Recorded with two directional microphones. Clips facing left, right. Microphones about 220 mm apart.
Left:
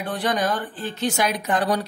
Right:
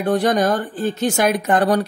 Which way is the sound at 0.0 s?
45° right (ahead or behind).